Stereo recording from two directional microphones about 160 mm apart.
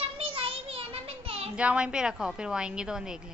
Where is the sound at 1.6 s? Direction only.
5° right (ahead or behind).